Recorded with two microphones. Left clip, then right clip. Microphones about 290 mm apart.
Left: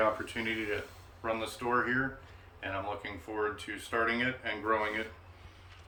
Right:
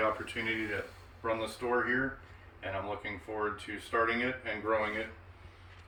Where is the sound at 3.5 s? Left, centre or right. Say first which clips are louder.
Right 1 dB; centre.